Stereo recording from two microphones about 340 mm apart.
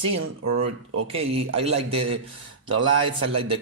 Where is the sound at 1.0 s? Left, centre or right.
Centre.